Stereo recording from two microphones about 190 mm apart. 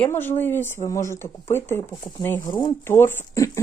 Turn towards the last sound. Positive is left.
turn(degrees=15)  # may be behind; listen again after turning